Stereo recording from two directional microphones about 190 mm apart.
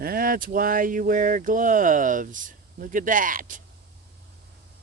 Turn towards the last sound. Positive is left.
turn(degrees=-45)  # may be behind; listen again after turning